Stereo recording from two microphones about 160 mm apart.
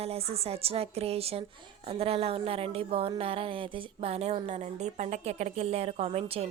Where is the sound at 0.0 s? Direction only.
40° right (ahead or behind).